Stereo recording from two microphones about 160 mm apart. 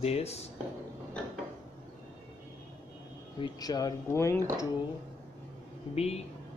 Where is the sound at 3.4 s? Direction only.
25° left (ahead or behind).